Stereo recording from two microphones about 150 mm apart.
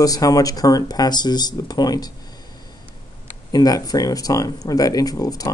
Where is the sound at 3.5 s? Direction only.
25° left (ahead or behind).